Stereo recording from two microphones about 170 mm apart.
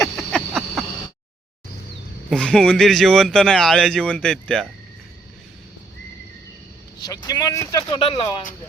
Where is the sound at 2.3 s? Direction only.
5° left (ahead or behind).